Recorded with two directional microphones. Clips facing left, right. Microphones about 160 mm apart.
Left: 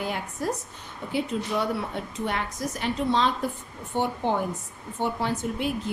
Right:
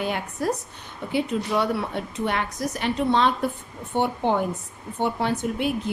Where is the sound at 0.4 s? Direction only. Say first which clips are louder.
Right 4 dB; 75° right (ahead or behind).